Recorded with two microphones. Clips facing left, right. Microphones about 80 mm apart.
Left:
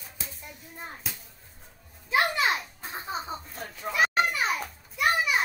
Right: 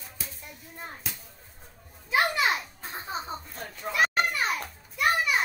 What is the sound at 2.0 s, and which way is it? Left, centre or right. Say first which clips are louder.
Children playing: even; centre.